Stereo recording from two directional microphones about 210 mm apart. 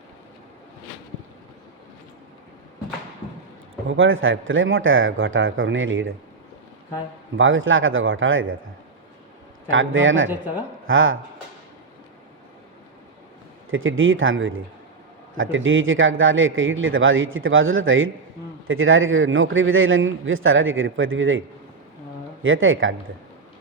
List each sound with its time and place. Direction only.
3.8 s a man's voice: 70° right (ahead or behind)
7.3 s a man's voice: 70° right (ahead or behind)
9.6 s a man's voice: 70° right (ahead or behind)
10.2 s speech: 5° right (ahead or behind)
10.8 s a man's voice: 70° right (ahead or behind)
13.7 s a man's voice: 70° right (ahead or behind)
22.4 s a man's voice: 70° right (ahead or behind)